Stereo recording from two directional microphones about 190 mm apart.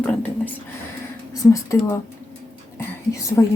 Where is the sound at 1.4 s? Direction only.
15° left (ahead or behind).